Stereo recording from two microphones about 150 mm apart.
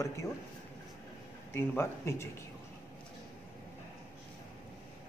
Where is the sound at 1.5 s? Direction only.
15° left (ahead or behind).